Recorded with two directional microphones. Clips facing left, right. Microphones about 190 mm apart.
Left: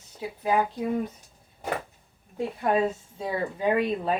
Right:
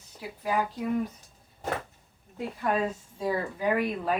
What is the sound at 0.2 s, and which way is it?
Speech, 25° left (ahead or behind).